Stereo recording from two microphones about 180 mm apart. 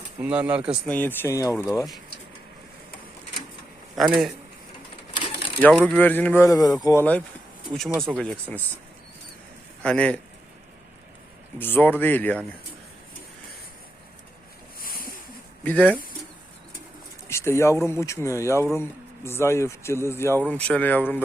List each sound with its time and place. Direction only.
0.2 s speech: 10° right (ahead or behind)
0.9 s speech: 10° left (ahead or behind)
3.9 s speech: centre (ahead or behind)
5.5 s speech: 5° left (ahead or behind)
8.2 s speech: 5° left (ahead or behind)
9.8 s speech: 5° left (ahead or behind)
11.6 s speech: 10° left (ahead or behind)
14.8 s a sound: 55° left (ahead or behind)
15.6 s speech: 10° left (ahead or behind)
17.2 s speech: 15° left (ahead or behind)